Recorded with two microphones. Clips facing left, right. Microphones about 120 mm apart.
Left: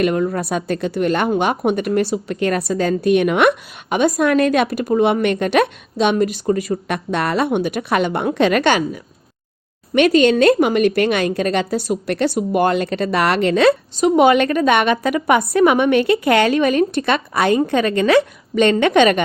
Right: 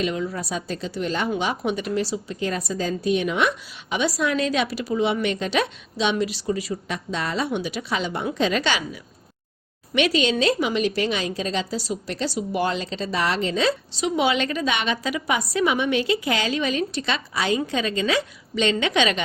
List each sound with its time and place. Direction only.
0.0 s speech: 55° left (ahead or behind)